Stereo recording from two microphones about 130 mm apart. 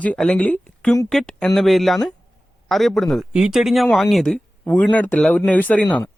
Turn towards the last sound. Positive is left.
turn(degrees=10)  # may be behind; listen again after turning